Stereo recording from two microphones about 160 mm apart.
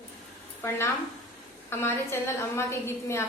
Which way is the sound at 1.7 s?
15° left (ahead or behind).